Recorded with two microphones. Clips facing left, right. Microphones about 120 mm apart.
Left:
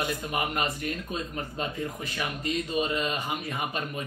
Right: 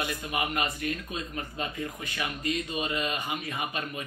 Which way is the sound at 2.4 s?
40° left (ahead or behind).